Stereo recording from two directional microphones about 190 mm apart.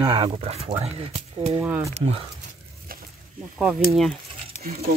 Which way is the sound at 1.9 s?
35° right (ahead or behind).